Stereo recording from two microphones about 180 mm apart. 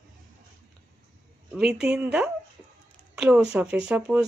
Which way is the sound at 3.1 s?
5° right (ahead or behind).